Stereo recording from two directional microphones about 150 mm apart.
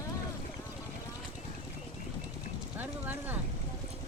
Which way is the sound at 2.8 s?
10° right (ahead or behind).